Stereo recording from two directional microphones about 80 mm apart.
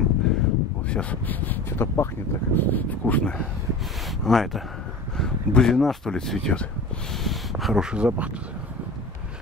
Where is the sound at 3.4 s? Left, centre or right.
Centre.